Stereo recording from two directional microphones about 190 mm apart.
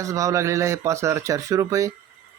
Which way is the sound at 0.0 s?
15° right (ahead or behind).